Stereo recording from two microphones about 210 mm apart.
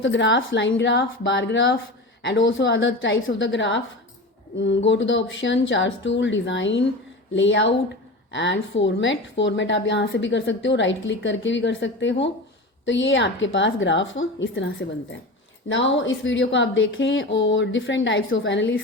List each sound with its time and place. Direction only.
0.0 s speech: 60° left (ahead or behind)